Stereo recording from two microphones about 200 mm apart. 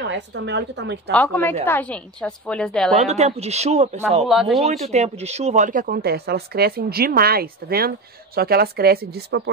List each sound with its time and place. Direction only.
0.1 s a woman's voice: 60° right (ahead or behind)
1.1 s a woman's voice: 10° left (ahead or behind)
3.0 s speech: 35° right (ahead or behind)
4.3 s speech: centre (ahead or behind)
4.9 s speech: 35° right (ahead or behind); by 9.4 s 50° right (ahead or behind)